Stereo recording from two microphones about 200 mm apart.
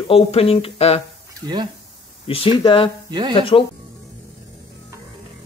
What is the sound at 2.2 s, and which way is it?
Speech, 25° left (ahead or behind).